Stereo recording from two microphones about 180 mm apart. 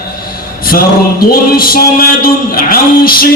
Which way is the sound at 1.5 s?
55° left (ahead or behind).